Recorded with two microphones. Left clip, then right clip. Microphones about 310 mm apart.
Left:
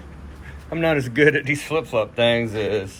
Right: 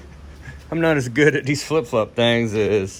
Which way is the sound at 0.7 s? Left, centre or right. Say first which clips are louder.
Right 2 dB; right.